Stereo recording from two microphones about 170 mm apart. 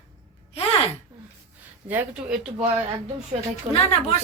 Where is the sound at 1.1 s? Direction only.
20° right (ahead or behind).